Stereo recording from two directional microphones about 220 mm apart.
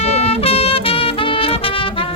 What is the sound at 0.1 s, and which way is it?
Music, 25° left (ahead or behind).